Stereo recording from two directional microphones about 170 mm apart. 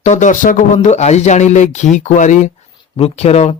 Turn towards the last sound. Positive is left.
turn(degrees=40)  # may be behind; listen again after turning